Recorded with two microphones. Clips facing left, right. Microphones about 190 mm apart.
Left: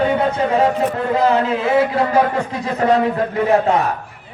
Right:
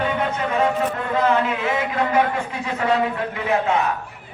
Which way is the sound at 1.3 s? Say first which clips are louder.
Left 2 dB; 35° left (ahead or behind).